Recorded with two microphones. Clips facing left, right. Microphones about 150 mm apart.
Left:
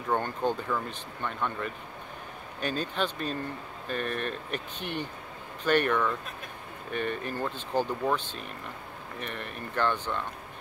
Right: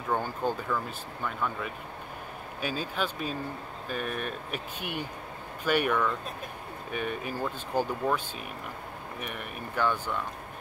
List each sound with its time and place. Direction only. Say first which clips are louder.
0.1 s speech: left 1 dB; 5° right (ahead or behind)